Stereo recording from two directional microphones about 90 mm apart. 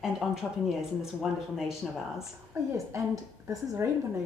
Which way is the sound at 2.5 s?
35° right (ahead or behind).